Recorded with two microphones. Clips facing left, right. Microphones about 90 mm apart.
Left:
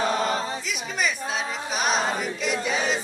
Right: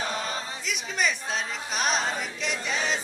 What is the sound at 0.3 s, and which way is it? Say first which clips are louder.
Choir: left 7 dB; 50° left (ahead or behind).